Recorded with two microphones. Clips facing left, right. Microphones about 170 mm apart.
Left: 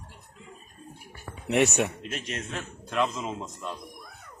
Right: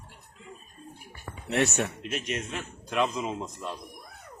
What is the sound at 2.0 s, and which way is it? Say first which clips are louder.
A man's voice: right 2 dB; 5° right (ahead or behind).